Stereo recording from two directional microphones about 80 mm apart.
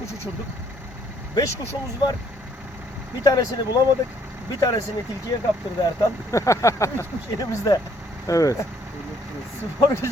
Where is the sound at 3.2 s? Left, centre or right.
Left.